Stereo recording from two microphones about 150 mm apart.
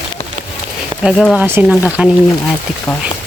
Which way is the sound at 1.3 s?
15° right (ahead or behind).